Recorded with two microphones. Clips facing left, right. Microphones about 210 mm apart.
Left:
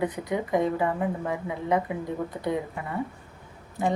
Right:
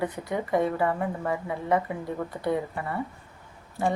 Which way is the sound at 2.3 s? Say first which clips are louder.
Right 2 dB; 10° left (ahead or behind).